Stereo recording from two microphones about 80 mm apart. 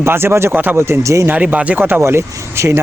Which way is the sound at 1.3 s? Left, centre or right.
Centre.